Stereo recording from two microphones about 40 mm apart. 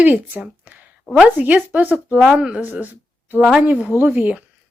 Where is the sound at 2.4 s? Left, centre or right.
Right.